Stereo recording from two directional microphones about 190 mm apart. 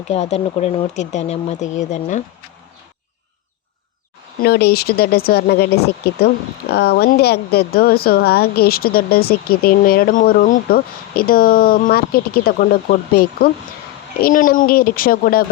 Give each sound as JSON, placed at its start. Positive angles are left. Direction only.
{"t": 0.1, "sound": "speech", "side_deg": 35}
{"t": 4.4, "sound": "speech", "side_deg": 55}